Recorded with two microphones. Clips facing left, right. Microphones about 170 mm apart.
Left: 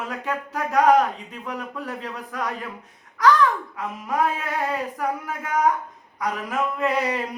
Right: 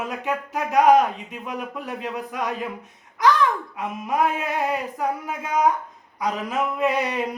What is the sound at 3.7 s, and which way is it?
A man's voice, 20° right (ahead or behind).